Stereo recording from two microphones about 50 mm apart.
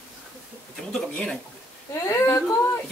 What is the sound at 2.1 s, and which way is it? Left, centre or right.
Speech, left.